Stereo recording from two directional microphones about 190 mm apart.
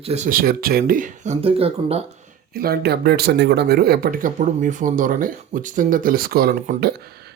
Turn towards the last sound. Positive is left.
turn(degrees=-55)  # may be behind; listen again after turning